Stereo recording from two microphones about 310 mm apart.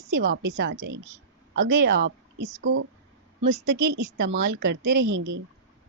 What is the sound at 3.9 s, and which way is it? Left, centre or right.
A woman's voice, right.